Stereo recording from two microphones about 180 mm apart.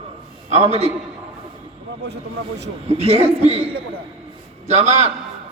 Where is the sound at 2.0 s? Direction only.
70° right (ahead or behind).